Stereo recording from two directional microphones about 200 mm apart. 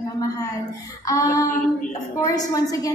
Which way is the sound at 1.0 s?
15° left (ahead or behind).